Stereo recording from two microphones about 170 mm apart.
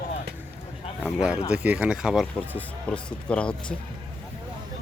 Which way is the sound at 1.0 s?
5° right (ahead or behind).